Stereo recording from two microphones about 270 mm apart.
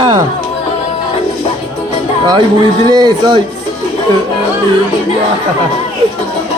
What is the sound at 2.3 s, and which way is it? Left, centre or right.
Speech, centre.